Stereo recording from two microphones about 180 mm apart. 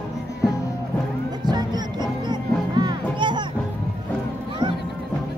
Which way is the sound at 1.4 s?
25° right (ahead or behind).